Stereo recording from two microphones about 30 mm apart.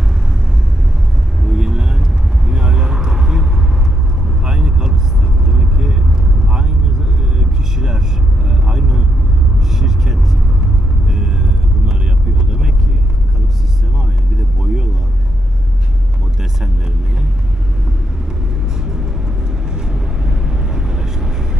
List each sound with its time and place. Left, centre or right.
1.4 s vehicle: centre
4.5 s vehicle: right
14.6 s vehicle: centre
19.7 s vehicle: right